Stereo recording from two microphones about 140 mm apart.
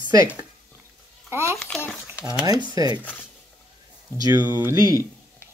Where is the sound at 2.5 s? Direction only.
30° right (ahead or behind).